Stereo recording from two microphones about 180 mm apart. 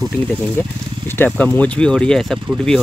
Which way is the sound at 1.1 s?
10° left (ahead or behind).